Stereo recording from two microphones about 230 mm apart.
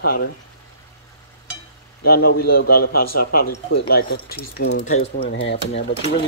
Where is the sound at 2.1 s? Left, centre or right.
Left.